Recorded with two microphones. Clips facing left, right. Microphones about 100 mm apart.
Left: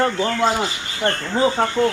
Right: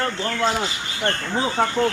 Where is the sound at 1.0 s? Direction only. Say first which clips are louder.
Left 3 dB; 5° left (ahead or behind).